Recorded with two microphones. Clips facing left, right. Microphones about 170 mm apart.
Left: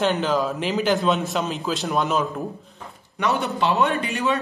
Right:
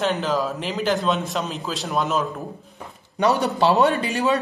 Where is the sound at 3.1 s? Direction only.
35° right (ahead or behind).